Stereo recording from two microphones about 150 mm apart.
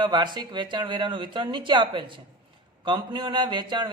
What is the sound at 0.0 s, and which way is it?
Speech, 30° right (ahead or behind).